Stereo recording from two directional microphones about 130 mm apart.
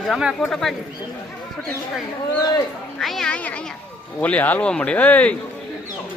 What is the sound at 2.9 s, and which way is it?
A man's voice, centre (ahead or behind).